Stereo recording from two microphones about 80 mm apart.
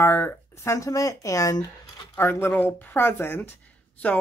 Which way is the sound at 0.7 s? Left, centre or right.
Left.